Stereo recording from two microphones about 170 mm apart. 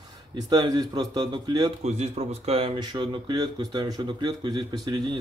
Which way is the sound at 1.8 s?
40° right (ahead or behind).